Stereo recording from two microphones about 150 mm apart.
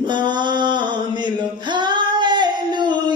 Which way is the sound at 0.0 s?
30° right (ahead or behind).